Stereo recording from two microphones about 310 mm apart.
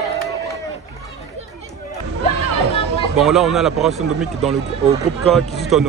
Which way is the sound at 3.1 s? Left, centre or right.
Centre.